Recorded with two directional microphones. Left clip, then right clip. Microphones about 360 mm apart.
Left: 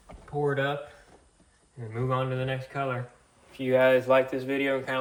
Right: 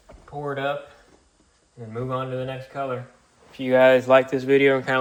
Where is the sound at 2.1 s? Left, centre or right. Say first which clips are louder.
Right 1 dB; centre.